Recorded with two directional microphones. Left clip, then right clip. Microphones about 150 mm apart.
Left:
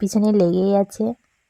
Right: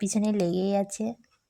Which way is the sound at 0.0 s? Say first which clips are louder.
Left 9 dB; 35° left (ahead or behind).